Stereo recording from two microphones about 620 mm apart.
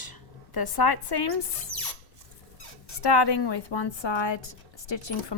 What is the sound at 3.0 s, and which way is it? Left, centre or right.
A woman's voice, left.